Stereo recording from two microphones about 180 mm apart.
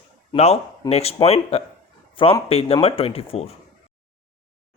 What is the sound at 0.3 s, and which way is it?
Speech, 35° left (ahead or behind).